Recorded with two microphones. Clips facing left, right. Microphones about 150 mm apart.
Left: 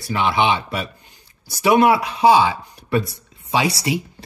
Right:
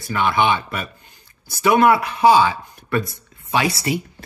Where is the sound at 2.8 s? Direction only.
45° right (ahead or behind).